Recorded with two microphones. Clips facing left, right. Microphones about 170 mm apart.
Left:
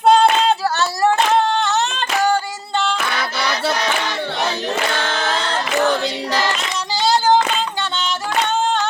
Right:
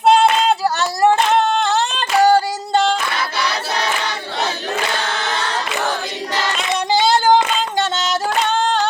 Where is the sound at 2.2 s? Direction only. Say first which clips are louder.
Right 6 dB; 40° right (ahead or behind).